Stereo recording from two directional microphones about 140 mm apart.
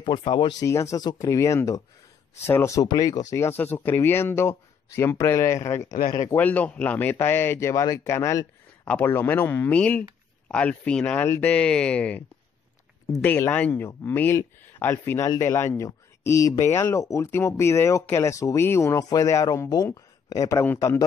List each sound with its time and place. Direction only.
0.0 s speech: 35° left (ahead or behind)
0.7 s speech: 20° left (ahead or behind)
5.9 s speech: 75° left (ahead or behind)
6.3 s speech: 10° left (ahead or behind)
13.2 s speech: 10° left (ahead or behind)